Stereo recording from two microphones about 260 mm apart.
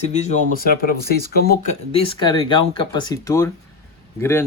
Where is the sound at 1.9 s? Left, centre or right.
Left.